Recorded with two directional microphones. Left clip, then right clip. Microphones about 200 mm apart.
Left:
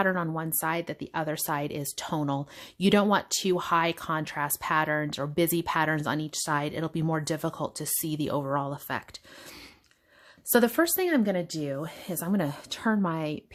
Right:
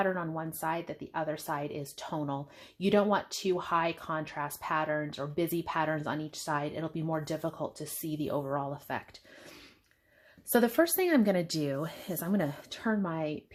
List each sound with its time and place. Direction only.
0.0 s speech: 35° left (ahead or behind)
10.5 s speech: 25° left (ahead or behind)